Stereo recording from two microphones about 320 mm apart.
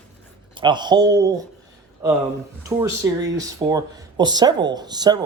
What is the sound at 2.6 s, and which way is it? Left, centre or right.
Speech, centre.